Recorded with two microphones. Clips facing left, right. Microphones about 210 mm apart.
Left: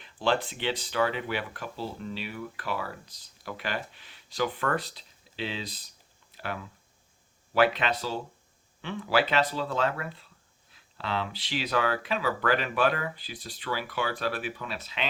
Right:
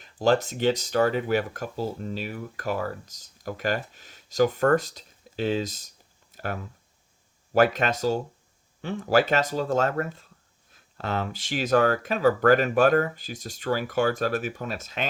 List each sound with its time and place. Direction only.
0.0 s speech: 40° right (ahead or behind)